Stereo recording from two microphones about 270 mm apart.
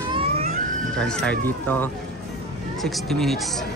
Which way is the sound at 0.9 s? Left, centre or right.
Centre.